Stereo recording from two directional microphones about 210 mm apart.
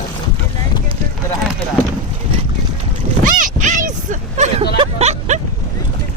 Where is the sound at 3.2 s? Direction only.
35° right (ahead or behind).